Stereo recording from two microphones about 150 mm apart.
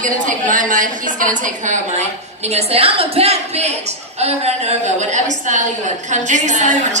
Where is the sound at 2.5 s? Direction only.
40° right (ahead or behind).